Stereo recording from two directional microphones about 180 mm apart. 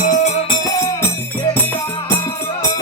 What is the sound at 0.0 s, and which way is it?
Music, 45° left (ahead or behind).